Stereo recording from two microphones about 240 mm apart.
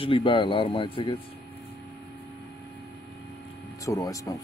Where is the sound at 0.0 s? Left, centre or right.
Left.